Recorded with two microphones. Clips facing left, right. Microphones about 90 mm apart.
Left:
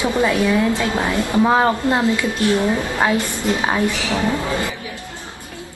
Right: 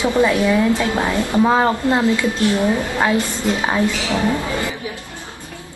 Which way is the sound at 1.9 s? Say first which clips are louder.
Right 1 dB; 20° left (ahead or behind).